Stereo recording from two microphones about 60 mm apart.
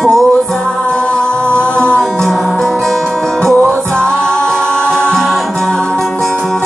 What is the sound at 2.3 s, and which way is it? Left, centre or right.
Music, centre.